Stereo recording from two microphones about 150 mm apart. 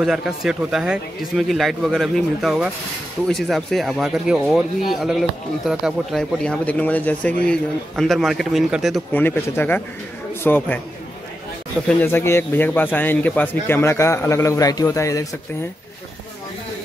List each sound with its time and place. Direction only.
0.0 s speech: 5° right (ahead or behind)
9.1 s a man's voice: 15° left (ahead or behind)
12.0 s a man's voice: 15° left (ahead or behind)